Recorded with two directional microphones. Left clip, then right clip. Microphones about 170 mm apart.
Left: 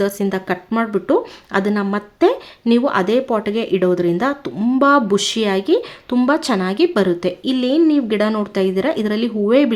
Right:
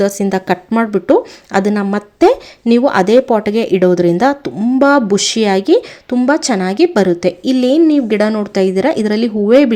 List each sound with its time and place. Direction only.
0.0 s speech: 25° right (ahead or behind)
4.6 s speech: 15° right (ahead or behind)